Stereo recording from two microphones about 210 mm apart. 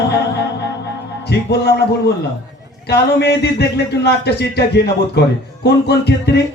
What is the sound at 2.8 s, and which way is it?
Speech, 50° left (ahead or behind).